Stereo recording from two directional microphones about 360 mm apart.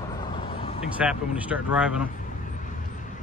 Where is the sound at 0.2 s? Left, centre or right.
Centre.